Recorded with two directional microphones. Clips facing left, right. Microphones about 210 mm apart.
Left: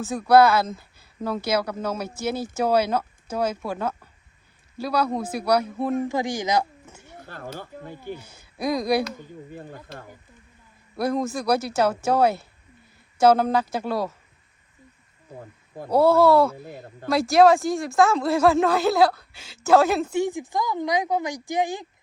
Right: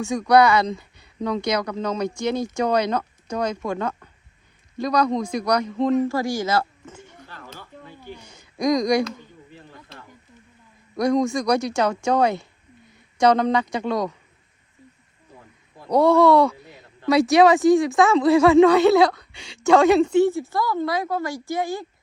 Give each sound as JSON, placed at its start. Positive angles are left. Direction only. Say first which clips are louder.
{"t": 0.0, "sound": "a man's voice", "louder": "even", "side_deg": 5}
{"t": 7.2, "sound": "a sound", "louder": "left 6 dB", "side_deg": 50}
{"t": 8.1, "sound": "speech", "louder": "left 3 dB", "side_deg": 5}
{"t": 9.5, "sound": "speech", "louder": "left 6 dB", "side_deg": 50}
{"t": 10.9, "sound": "speech", "louder": "right 5 dB", "side_deg": 5}
{"t": 15.4, "sound": "a sound", "louder": "left 10 dB", "side_deg": 50}
{"t": 15.9, "sound": "speech", "louder": "right 1 dB", "side_deg": 5}
{"t": 16.7, "sound": "a sound", "louder": "left 8 dB", "side_deg": 50}
{"t": 17.1, "sound": "speech", "louder": "right 1 dB", "side_deg": 0}